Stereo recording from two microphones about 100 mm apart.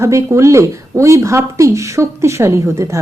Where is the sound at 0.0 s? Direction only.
25° right (ahead or behind).